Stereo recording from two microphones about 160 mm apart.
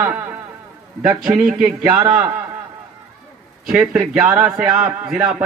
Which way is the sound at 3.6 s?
5° right (ahead or behind).